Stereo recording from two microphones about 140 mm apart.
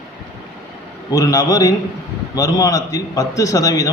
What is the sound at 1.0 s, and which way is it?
A man's voice, 25° left (ahead or behind).